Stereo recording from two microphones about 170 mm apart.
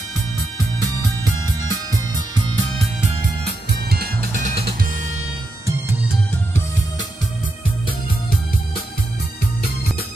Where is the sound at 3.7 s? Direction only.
70° right (ahead or behind).